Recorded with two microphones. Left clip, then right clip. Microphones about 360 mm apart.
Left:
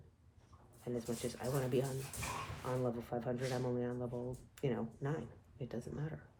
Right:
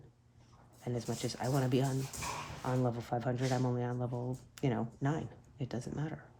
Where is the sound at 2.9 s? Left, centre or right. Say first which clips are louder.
Right 4 dB; right.